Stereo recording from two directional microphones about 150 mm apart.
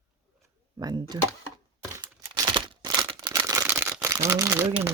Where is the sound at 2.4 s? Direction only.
30° right (ahead or behind).